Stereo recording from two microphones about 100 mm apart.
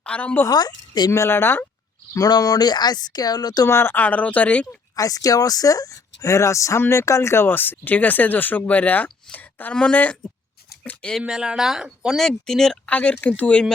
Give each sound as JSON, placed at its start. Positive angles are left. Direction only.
{"t": 0.0, "sound": "a woman's voice", "side_deg": 10}
{"t": 0.4, "sound": "a woman's voice", "side_deg": 40}
{"t": 1.1, "sound": "speech", "side_deg": 25}
{"t": 2.1, "sound": "speech", "side_deg": 40}
{"t": 3.7, "sound": "speech", "side_deg": 25}
{"t": 4.9, "sound": "speech", "side_deg": 35}
{"t": 9.0, "sound": "a sound", "side_deg": 15}
{"t": 9.7, "sound": "speech", "side_deg": 15}
{"t": 11.2, "sound": "speech", "side_deg": -10}